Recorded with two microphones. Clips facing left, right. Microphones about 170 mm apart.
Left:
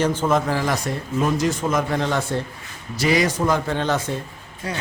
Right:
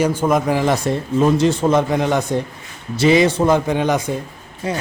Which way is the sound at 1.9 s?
15° right (ahead or behind).